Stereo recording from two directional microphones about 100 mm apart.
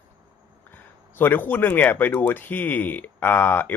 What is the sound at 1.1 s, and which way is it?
Speech, 20° left (ahead or behind).